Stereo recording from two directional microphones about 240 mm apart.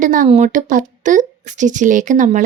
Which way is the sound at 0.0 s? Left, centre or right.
Right.